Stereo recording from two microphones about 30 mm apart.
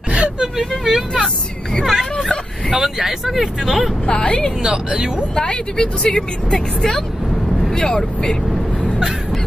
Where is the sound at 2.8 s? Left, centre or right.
Centre.